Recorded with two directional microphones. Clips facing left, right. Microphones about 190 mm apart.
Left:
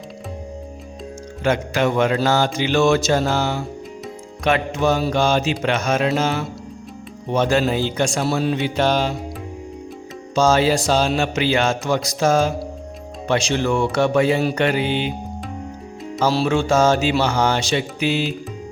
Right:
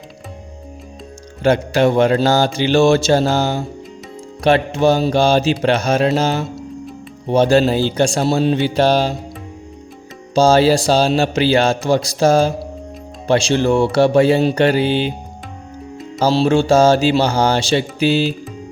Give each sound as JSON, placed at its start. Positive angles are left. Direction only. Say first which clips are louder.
{"t": 1.5, "sound": "speech", "louder": "right 5 dB", "side_deg": -35}
{"t": 10.3, "sound": "speech", "louder": "right 4 dB", "side_deg": -35}
{"t": 16.2, "sound": "speech", "louder": "right 4 dB", "side_deg": -30}